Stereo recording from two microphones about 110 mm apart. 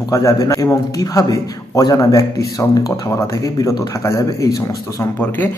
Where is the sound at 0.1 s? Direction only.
30° left (ahead or behind).